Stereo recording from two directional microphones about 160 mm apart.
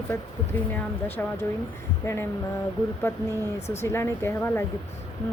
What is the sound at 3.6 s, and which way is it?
Speech, 40° left (ahead or behind).